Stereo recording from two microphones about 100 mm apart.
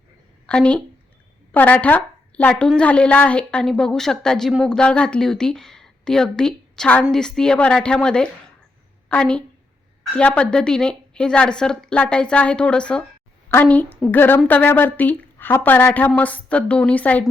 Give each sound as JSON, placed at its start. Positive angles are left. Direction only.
{"t": 0.4, "sound": "a woman's voice", "side_deg": 10}